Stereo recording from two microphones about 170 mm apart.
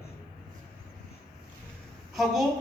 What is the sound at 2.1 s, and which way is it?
Speech, centre (ahead or behind).